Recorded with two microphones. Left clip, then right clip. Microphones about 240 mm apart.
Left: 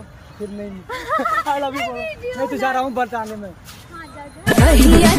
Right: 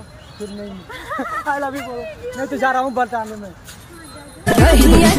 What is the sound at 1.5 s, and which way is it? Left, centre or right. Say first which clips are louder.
Music: left 1 dB; centre.